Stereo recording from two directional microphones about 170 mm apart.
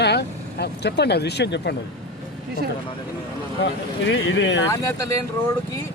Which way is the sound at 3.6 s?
90° left.